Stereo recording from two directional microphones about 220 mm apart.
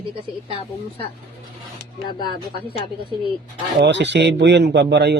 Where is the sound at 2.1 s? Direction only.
20° left (ahead or behind).